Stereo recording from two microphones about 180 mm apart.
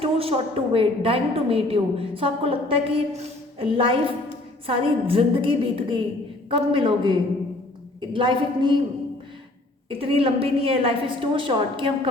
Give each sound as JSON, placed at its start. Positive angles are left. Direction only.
{"t": 0.0, "sound": "a woman's voice", "side_deg": -30}
{"t": 9.9, "sound": "a woman's voice", "side_deg": -30}